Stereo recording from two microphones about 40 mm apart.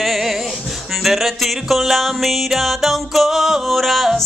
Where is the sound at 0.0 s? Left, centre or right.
Centre.